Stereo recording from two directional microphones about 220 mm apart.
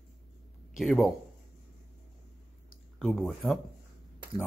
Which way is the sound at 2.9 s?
Centre (ahead or behind).